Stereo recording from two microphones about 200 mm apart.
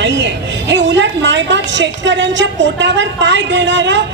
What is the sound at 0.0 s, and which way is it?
A woman's voice, 60° right (ahead or behind).